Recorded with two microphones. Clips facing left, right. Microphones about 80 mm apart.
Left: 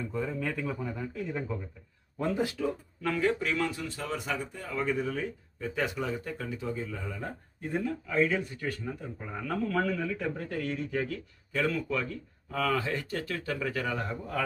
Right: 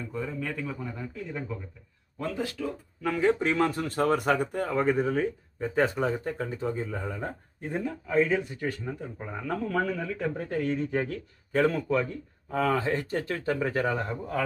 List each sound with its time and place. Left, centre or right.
0.1 s speech: centre
0.3 s speech: left; by 1.5 s centre
2.1 s speech: centre
3.0 s speech: centre
3.3 s speech: right
7.3 s speech: right
11.5 s speech: right
11.9 s speech: right